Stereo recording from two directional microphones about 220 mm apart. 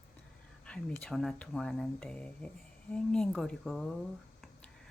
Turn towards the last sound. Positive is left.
turn(degrees=0)  # may be behind; listen again after turning